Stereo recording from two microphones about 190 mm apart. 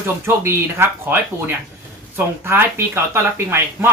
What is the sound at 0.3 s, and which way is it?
Speech, 15° right (ahead or behind).